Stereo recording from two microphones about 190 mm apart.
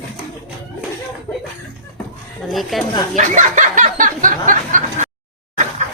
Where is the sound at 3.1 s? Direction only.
40° right (ahead or behind).